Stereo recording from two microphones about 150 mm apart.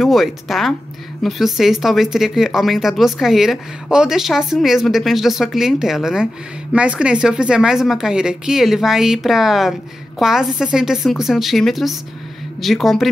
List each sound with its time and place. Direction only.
0.0 s speech: centre (ahead or behind)